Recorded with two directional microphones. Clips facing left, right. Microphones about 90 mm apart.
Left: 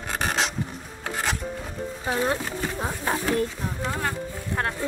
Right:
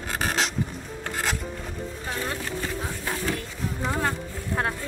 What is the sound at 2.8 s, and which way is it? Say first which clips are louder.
Speech: left 4 dB; 45° left (ahead or behind).